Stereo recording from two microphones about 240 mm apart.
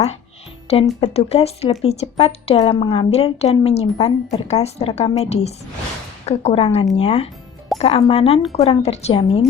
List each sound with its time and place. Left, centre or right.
1.0 s a woman's voice: left